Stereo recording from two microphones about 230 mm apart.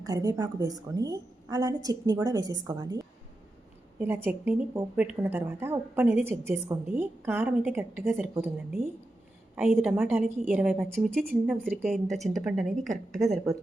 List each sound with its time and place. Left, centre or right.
0.0 s a woman's voice: centre
10.2 s a woman's voice: right
10.5 s speech: centre